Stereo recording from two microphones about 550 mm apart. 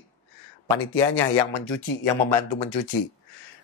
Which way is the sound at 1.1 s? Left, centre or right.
Left.